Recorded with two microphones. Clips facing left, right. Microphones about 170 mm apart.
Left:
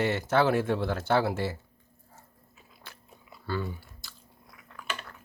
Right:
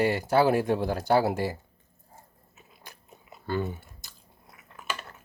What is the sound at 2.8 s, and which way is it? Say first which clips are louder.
Biting: right 1 dB; 20° right (ahead or behind).